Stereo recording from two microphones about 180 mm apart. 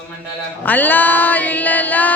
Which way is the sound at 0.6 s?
10° left (ahead or behind).